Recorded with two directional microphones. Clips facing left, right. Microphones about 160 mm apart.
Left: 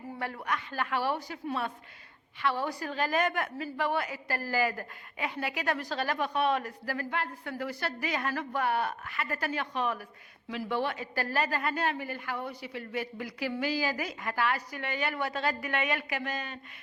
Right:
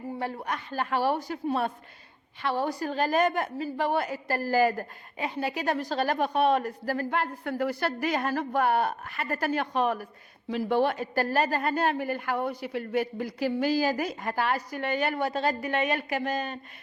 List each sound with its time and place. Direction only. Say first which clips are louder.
0.2 s a woman's voice: left 1 dB; 30° right (ahead or behind)